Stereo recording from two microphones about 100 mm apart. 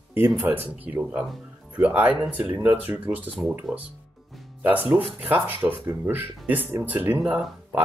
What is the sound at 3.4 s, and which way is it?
Speech, 5° right (ahead or behind).